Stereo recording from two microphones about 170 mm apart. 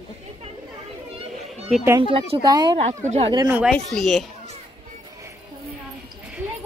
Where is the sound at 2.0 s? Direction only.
30° right (ahead or behind).